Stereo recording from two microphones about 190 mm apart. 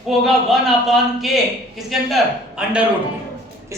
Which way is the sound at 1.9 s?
Centre (ahead or behind).